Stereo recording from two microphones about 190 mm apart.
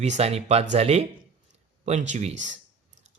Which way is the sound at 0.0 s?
35° right (ahead or behind).